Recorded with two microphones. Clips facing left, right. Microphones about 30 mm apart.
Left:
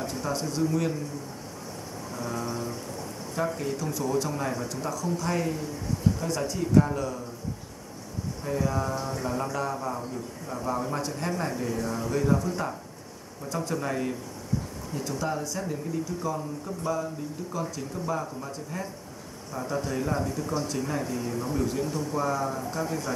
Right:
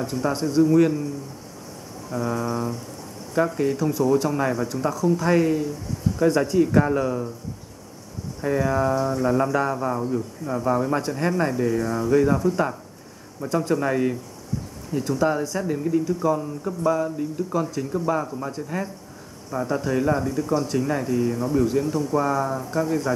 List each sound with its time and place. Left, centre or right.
0.0 s speech: centre
2.1 s speech: centre
3.5 s speech: centre
6.7 s speech: right
8.4 s speech: right
8.9 s speech: centre
9.4 s speech: right
13.6 s speech: centre